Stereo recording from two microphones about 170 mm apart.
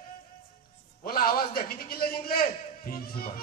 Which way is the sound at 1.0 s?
60° left (ahead or behind).